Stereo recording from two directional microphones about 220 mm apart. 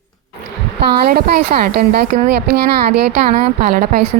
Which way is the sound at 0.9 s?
45° right (ahead or behind).